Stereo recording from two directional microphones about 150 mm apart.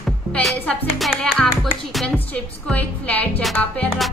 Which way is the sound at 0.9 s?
Centre (ahead or behind).